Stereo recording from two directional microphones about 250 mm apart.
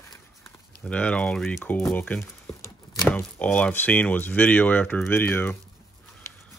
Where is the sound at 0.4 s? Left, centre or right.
Centre.